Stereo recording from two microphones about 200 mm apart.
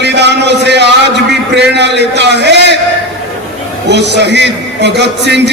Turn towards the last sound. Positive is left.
turn(degrees=-60)  # may be behind; listen again after turning